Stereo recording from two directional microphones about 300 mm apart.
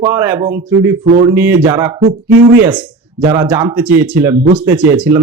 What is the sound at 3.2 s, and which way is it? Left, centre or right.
Speech, centre.